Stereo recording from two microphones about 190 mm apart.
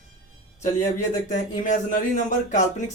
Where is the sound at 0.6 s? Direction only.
40° left (ahead or behind).